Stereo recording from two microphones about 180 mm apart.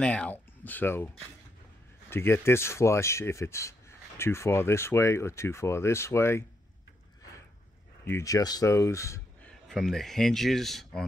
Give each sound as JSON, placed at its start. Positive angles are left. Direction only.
{"t": 0.0, "sound": "speech", "side_deg": 5}
{"t": 8.1, "sound": "speech", "side_deg": 20}
{"t": 9.7, "sound": "speech", "side_deg": 0}